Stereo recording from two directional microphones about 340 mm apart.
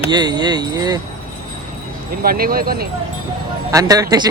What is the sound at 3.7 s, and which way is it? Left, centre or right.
Speech, centre.